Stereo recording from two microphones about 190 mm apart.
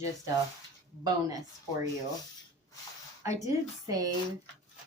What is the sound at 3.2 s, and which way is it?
Speech, 15° right (ahead or behind).